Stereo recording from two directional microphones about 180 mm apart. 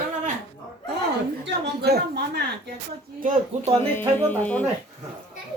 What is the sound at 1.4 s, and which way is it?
A woman's voice, 70° right (ahead or behind).